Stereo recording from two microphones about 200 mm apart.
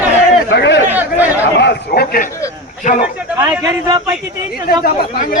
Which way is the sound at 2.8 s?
35° left (ahead or behind).